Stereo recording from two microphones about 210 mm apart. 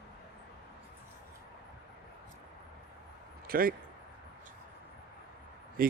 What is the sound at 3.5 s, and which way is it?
Speech, 45° right (ahead or behind).